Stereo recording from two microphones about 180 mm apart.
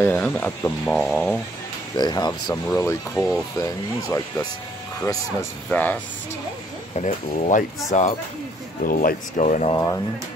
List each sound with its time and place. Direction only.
0.0 s speech: 10° left (ahead or behind)
2.0 s speech: 25° left (ahead or behind)
7.0 s speech: 40° left (ahead or behind)